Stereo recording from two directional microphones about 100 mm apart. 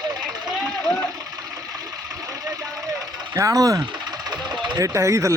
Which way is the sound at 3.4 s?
35° right (ahead or behind).